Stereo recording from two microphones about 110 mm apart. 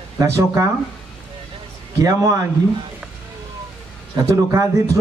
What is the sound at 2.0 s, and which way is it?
Speech, 30° right (ahead or behind).